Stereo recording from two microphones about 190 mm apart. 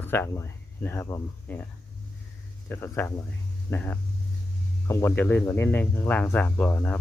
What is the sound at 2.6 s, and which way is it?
Speech, 10° left (ahead or behind).